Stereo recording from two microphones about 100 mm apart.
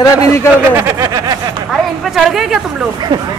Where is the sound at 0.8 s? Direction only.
30° right (ahead or behind).